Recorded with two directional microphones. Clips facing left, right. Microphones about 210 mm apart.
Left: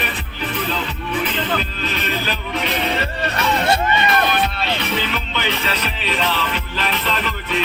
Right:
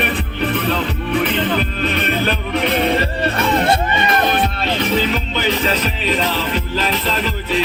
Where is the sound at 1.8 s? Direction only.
55° right (ahead or behind).